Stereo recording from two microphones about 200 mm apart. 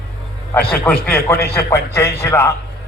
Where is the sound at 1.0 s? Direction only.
10° left (ahead or behind).